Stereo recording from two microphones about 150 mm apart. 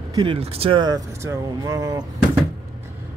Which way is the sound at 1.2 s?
20° right (ahead or behind).